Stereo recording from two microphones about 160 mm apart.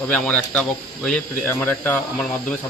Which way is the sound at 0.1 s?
10° left (ahead or behind).